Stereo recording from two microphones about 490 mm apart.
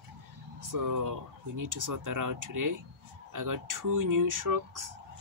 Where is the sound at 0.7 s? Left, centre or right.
Right.